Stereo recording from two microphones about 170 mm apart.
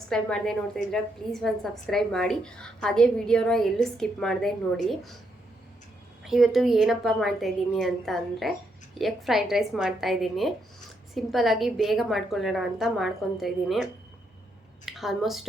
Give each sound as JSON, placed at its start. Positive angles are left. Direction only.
{"t": 0.1, "sound": "a woman's voice", "side_deg": 5}
{"t": 6.2, "sound": "a woman's voice", "side_deg": 0}
{"t": 14.8, "sound": "a woman's voice", "side_deg": 0}